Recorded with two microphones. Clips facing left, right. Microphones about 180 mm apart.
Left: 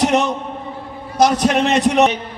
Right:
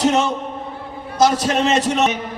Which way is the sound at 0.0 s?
65° left (ahead or behind).